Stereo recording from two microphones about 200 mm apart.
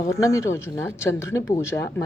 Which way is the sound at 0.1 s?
15° left (ahead or behind).